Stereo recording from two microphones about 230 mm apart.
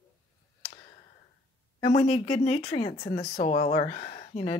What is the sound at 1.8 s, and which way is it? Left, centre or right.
Speech, left.